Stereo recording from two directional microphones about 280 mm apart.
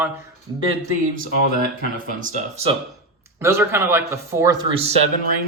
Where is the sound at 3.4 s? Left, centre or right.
Centre.